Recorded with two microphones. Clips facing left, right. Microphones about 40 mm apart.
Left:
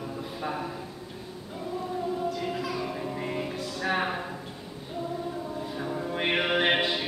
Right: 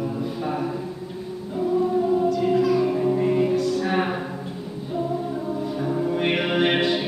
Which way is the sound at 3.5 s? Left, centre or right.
Centre.